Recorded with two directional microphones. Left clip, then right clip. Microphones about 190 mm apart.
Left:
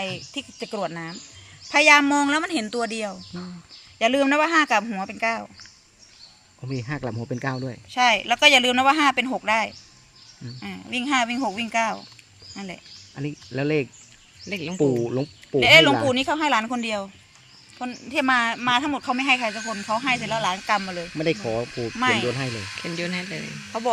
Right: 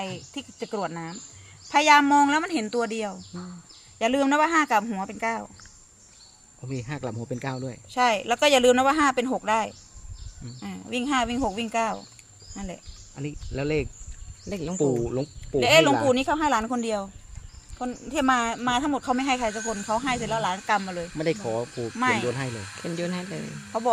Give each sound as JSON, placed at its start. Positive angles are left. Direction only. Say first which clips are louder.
{"t": 0.0, "sound": "speech", "louder": "left 4 dB", "side_deg": 0}
{"t": 6.6, "sound": "speech", "louder": "left 3 dB", "side_deg": 35}
{"t": 7.9, "sound": "speech", "louder": "left 3 dB", "side_deg": -35}
{"t": 13.1, "sound": "speech", "louder": "left 3 dB", "side_deg": 40}
{"t": 14.5, "sound": "speech", "louder": "left 2 dB", "side_deg": -5}
{"t": 15.0, "sound": "speech", "louder": "left 2 dB", "side_deg": 40}
{"t": 15.6, "sound": "speech", "louder": "left 4 dB", "side_deg": -25}
{"t": 20.5, "sound": "speech", "louder": "left 2 dB", "side_deg": -10}
{"t": 21.2, "sound": "speech", "louder": "left 3 dB", "side_deg": 35}
{"t": 21.9, "sound": "speech", "louder": "left 2 dB", "side_deg": -5}
{"t": 22.3, "sound": "speech", "louder": "left 3 dB", "side_deg": 35}
{"t": 22.8, "sound": "speech", "louder": "left 1 dB", "side_deg": -5}